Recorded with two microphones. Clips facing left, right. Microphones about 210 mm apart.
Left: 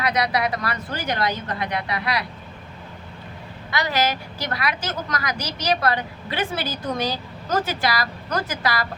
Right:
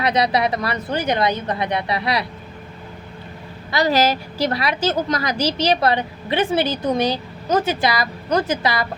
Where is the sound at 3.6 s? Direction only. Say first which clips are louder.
Right 6 dB; 35° right (ahead or behind).